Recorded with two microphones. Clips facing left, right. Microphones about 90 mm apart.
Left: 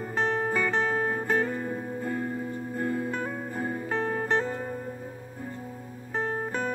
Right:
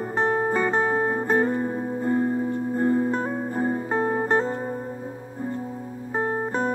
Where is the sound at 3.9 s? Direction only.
20° right (ahead or behind).